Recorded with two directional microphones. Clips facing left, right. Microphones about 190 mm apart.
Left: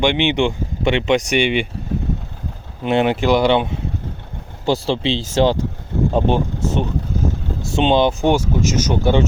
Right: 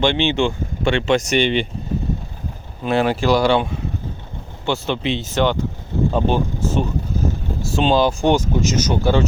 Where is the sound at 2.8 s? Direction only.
20° left (ahead or behind).